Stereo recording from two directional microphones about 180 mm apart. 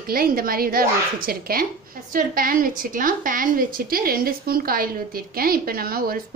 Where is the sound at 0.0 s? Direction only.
55° right (ahead or behind).